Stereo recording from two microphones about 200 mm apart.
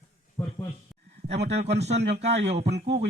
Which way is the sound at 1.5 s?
35° right (ahead or behind).